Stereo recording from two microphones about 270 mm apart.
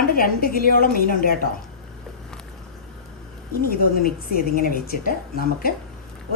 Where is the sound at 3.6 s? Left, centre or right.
Left.